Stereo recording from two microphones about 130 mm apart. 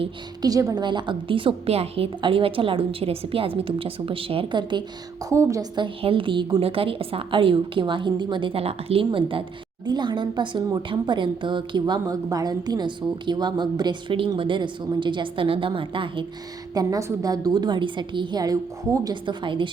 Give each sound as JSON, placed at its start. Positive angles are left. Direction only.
{"t": 0.4, "sound": "a woman's voice", "side_deg": -25}
{"t": 5.3, "sound": "a woman's voice", "side_deg": -25}
{"t": 5.8, "sound": "a woman's voice", "side_deg": -40}
{"t": 16.7, "sound": "a woman's voice", "side_deg": -30}
{"t": 19.2, "sound": "speech", "side_deg": -40}